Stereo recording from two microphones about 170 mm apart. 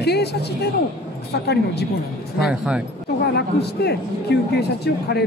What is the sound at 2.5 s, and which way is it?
Speech, 5° right (ahead or behind).